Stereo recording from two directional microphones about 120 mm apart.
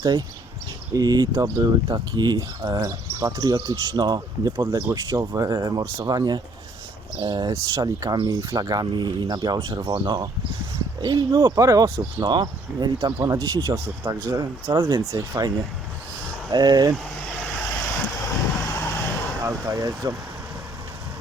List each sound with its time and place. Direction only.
0.0 s speech: 35° right (ahead or behind)
8.3 s speech: 30° right (ahead or behind)
14.8 s speech: 40° right (ahead or behind)
15.1 s speech: 25° right (ahead or behind)
18.1 s vehicle: 25° left (ahead or behind)
19.5 s speech: 25° right (ahead or behind)